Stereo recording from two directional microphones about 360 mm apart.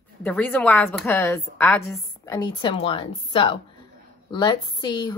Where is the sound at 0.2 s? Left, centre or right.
Centre.